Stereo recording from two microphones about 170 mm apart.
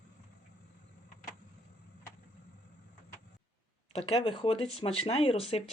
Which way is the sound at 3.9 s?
35° left (ahead or behind).